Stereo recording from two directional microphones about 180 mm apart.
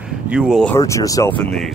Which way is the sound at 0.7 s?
20° left (ahead or behind).